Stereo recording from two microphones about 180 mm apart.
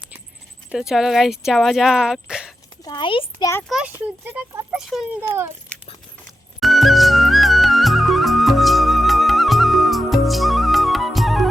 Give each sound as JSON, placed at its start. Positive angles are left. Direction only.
{"t": 0.7, "sound": "speech", "side_deg": -5}
{"t": 2.8, "sound": "a child's voice", "side_deg": 25}
{"t": 3.7, "sound": "speech", "side_deg": -5}
{"t": 6.6, "sound": "music", "side_deg": 0}